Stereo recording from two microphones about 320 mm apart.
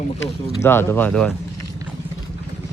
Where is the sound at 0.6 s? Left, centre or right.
Centre.